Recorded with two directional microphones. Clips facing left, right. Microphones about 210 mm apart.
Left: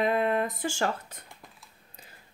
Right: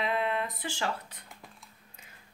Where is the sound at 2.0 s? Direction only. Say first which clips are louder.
Left 5 dB; 35° left (ahead or behind).